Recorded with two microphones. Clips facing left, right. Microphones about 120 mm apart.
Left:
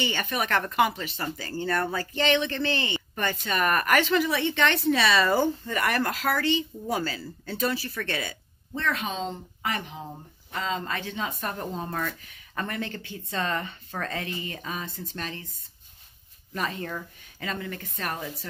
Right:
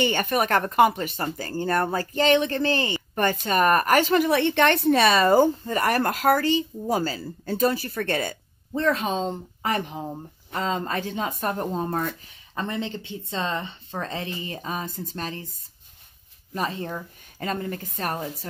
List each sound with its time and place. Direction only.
0.0 s speech: 50° right (ahead or behind)
12.5 s speech: 25° right (ahead or behind)
16.5 s speech: 30° right (ahead or behind)
17.4 s speech: 45° right (ahead or behind)